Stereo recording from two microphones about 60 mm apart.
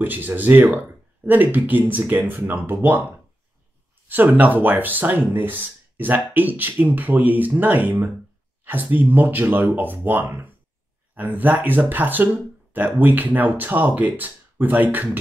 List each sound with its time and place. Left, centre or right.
0.0 s speech: right